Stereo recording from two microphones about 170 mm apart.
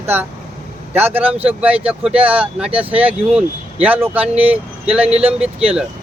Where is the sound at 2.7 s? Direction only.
35° right (ahead or behind).